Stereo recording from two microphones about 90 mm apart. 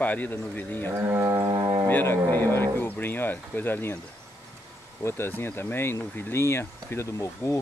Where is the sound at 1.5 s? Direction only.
60° right (ahead or behind).